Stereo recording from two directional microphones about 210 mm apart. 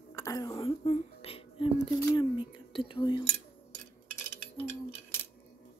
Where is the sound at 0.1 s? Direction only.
15° left (ahead or behind).